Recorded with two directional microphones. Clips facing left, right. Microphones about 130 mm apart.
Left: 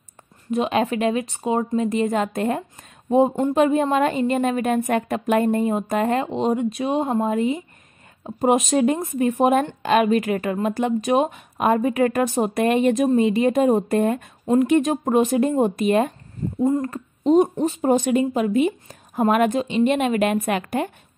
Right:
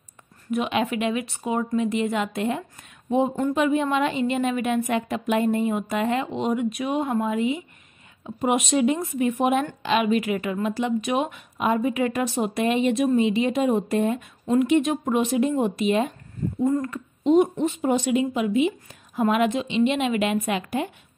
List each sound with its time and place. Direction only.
0.5 s a woman's voice: 35° left (ahead or behind)
7.2 s a woman's voice: 40° left (ahead or behind)
11.5 s speech: 50° left (ahead or behind)
14.4 s a woman's voice: 35° left (ahead or behind)
16.6 s speech: 25° left (ahead or behind)
16.9 s speech: 40° left (ahead or behind)